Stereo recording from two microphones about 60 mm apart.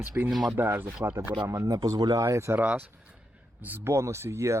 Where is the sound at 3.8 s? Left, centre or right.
Right.